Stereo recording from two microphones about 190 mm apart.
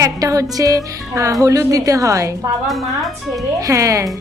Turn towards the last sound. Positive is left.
turn(degrees=-15)  # may be behind; listen again after turning